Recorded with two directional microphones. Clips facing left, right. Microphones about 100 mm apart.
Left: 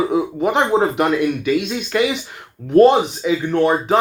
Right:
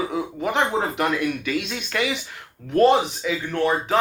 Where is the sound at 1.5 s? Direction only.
10° left (ahead or behind).